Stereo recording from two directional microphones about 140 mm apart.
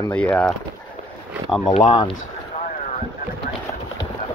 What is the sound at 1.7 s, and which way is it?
Speech, 35° left (ahead or behind).